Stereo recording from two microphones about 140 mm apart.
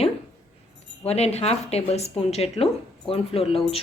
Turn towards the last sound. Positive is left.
turn(degrees=45)  # may be behind; listen again after turning